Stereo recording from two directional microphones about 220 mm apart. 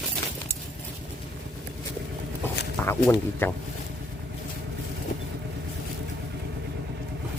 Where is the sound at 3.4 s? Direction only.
10° left (ahead or behind).